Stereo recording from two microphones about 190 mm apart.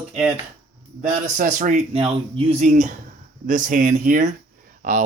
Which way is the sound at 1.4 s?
45° right (ahead or behind).